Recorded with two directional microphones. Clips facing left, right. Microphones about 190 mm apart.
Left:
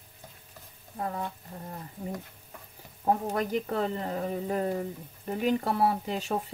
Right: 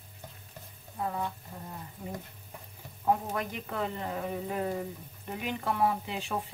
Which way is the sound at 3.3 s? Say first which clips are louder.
Left 6 dB; 35° left (ahead or behind).